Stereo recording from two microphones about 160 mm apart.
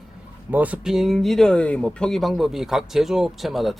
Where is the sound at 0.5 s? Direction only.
10° right (ahead or behind).